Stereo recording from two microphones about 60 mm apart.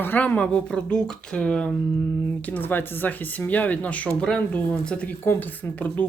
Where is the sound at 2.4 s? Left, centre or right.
Left.